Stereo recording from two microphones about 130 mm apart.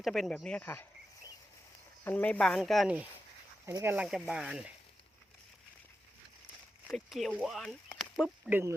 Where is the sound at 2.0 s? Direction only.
10° left (ahead or behind).